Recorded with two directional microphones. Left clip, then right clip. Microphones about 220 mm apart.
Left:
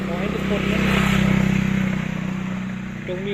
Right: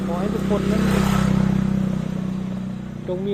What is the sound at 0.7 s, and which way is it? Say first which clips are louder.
Vehicle: left 1 dB; 30° right (ahead or behind).